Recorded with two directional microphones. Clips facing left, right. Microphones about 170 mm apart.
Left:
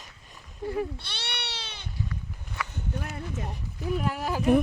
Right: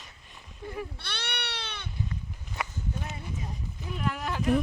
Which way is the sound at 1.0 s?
55° right (ahead or behind).